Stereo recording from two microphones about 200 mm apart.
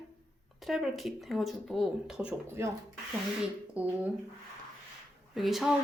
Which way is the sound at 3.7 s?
5° right (ahead or behind).